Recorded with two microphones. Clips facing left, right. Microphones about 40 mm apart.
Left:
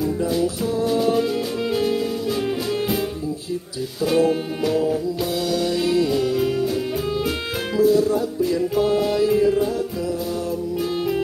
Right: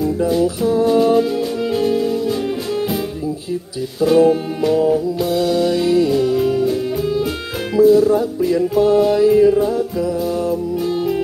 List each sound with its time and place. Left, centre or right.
0.8 s music: centre
1.1 s music: centre
4.0 s music: centre
8.7 s music: centre
9.1 s music: centre